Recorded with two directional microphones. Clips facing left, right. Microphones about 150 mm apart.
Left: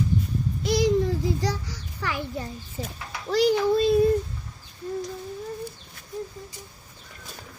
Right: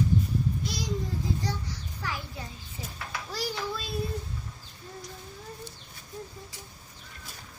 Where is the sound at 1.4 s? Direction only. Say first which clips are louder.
Left 5 dB; 90° left.